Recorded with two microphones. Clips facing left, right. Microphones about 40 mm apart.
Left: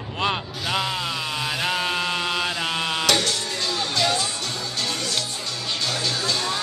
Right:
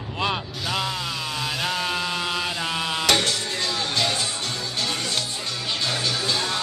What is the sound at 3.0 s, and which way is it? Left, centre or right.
Music, right.